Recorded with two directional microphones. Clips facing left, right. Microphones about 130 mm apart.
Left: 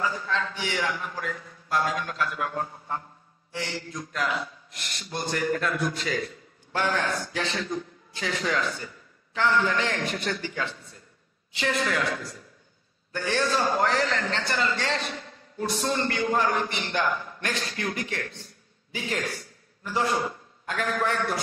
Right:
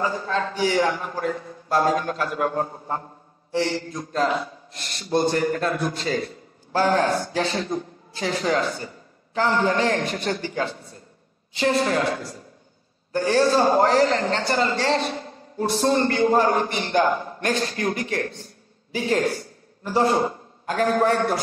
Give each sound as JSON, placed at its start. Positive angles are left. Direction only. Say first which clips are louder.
{"t": 0.0, "sound": "a man's voice", "louder": "right 4 dB", "side_deg": -35}